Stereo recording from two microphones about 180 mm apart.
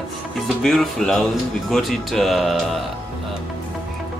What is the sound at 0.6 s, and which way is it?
Speech, centre (ahead or behind).